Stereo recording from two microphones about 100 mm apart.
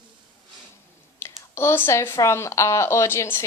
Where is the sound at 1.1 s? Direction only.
25° left (ahead or behind).